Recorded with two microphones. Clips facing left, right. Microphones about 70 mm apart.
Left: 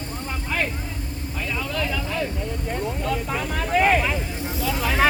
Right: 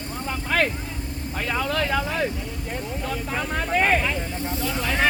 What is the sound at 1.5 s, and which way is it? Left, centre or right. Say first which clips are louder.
Vehicle: right 3 dB; right.